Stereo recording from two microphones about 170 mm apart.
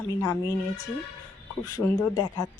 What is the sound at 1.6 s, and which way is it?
Speech, 20° left (ahead or behind).